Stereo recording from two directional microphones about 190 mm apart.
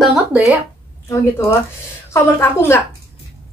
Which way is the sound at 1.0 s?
15° left (ahead or behind).